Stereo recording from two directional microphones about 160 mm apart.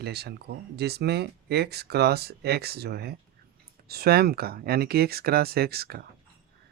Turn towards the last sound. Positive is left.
turn(degrees=-75)  # may be behind; listen again after turning